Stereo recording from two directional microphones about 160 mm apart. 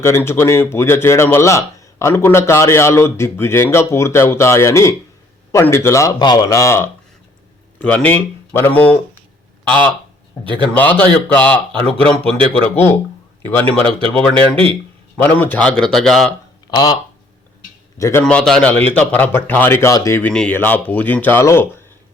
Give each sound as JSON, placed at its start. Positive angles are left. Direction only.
{"t": 0.0, "sound": "speech", "side_deg": 15}
{"t": 10.4, "sound": "a man's voice", "side_deg": -30}
{"t": 10.7, "sound": "speech", "side_deg": 10}
{"t": 14.5, "sound": "a man's voice", "side_deg": -35}
{"t": 15.2, "sound": "a man's voice", "side_deg": 10}
{"t": 16.7, "sound": "a man's voice", "side_deg": 25}
{"t": 18.2, "sound": "speech", "side_deg": 5}